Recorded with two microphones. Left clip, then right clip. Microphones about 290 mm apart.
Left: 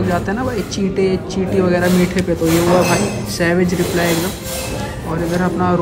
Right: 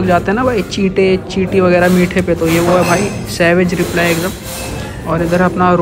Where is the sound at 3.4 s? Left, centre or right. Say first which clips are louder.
Right 5 dB; centre.